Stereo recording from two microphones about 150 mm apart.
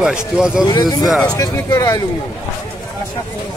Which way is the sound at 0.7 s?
25° left (ahead or behind).